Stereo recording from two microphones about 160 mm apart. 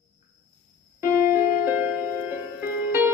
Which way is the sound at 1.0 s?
15° right (ahead or behind).